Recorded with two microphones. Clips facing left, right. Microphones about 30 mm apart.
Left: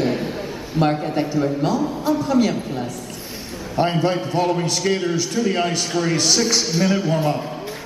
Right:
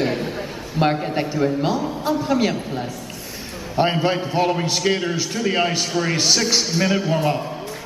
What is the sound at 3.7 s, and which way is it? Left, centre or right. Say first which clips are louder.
A man's voice: even; centre.